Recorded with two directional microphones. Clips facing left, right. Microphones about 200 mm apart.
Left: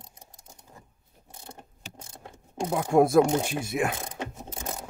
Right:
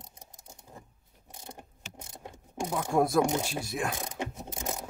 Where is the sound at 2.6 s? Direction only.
25° left (ahead or behind).